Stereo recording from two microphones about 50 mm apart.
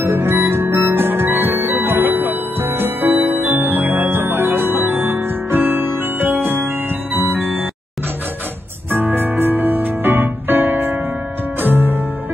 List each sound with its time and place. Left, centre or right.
0.0 s music: right
8.9 s music: right